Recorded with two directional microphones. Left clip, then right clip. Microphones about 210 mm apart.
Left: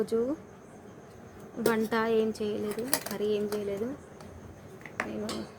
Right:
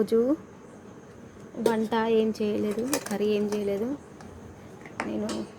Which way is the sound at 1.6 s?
Centre (ahead or behind).